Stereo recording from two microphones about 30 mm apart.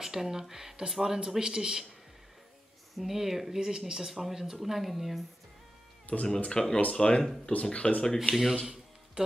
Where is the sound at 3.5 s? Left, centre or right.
Centre.